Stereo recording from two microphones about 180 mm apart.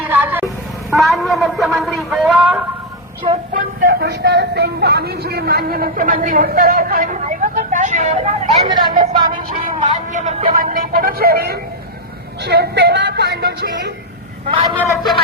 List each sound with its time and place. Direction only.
0.1 s vehicle: 10° right (ahead or behind)
0.9 s a sound: centre (ahead or behind)
3.5 s speech: 50° right (ahead or behind)
8.7 s a woman's voice: 25° right (ahead or behind)
9.6 s speech: 45° right (ahead or behind)
10.5 s speech: 50° right (ahead or behind); by 13.9 s 70° right (ahead or behind)
14.8 s speech: centre (ahead or behind)